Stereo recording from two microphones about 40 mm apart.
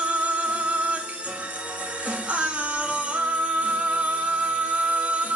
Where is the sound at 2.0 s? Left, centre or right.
Right.